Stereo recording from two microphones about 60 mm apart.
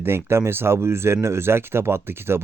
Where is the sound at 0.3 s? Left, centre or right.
Right.